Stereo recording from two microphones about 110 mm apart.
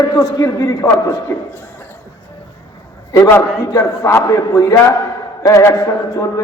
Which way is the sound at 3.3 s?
25° left (ahead or behind).